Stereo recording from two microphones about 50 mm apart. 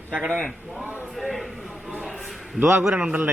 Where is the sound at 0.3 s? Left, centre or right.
Left.